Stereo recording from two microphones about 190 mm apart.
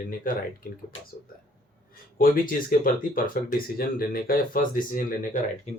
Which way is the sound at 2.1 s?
50° left (ahead or behind).